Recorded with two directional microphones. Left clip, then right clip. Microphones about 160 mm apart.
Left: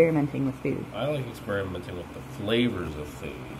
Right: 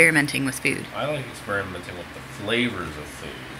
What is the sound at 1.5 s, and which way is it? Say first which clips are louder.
Speech: right 3 dB; 15° left (ahead or behind).